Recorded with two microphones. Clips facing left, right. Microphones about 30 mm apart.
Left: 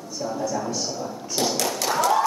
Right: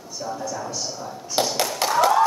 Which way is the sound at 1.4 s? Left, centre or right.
Right.